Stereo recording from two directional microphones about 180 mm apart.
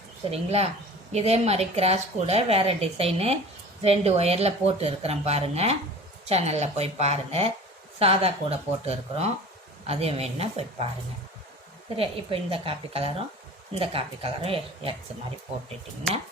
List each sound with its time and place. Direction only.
0.3 s a woman's voice: 35° right (ahead or behind)
11.9 s a woman's voice: 30° right (ahead or behind)